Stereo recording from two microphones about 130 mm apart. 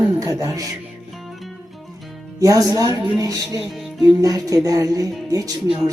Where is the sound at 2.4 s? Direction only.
25° right (ahead or behind).